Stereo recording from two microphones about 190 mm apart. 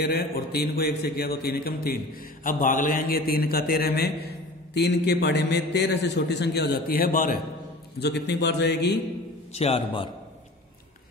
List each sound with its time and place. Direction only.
0.0 s a man's voice: 55° left (ahead or behind)
8.0 s a man's voice: 60° left (ahead or behind)
9.5 s a man's voice: 35° left (ahead or behind)